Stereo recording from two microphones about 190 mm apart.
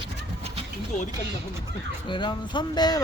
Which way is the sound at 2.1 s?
25° left (ahead or behind).